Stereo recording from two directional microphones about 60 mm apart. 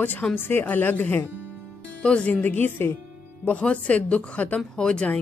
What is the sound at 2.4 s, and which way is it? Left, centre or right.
Speech, left.